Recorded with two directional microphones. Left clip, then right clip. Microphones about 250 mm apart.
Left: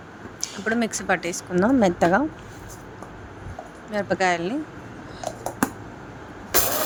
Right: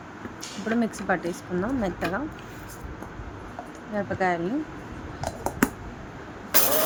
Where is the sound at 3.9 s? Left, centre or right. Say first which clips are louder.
Left 4 dB; left.